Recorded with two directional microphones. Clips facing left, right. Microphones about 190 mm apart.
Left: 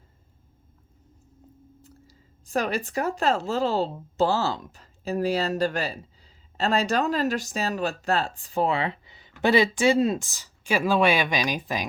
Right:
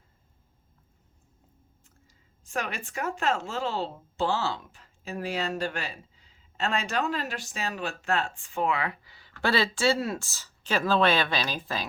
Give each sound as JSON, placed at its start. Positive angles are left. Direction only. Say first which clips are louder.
{"t": 1.8, "sound": "speech", "louder": "left 12 dB", "side_deg": 35}